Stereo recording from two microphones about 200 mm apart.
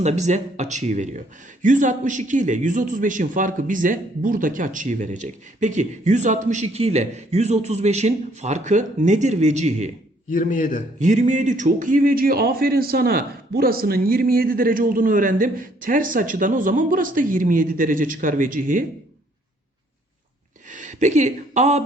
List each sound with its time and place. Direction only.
0.0 s a man's voice: 35° right (ahead or behind)
10.2 s a man's voice: 40° left (ahead or behind)
11.0 s a man's voice: 35° right (ahead or behind)
20.7 s speech: 40° right (ahead or behind)